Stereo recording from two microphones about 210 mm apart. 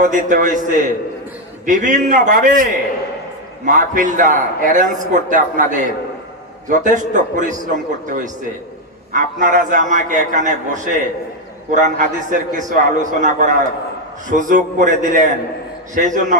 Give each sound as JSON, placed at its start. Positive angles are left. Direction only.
{"t": 0.0, "sound": "a man's voice", "side_deg": -35}